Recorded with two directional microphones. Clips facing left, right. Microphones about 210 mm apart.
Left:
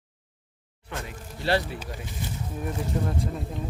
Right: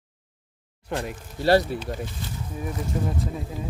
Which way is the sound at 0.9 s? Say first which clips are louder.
Right 7 dB; 40° right (ahead or behind).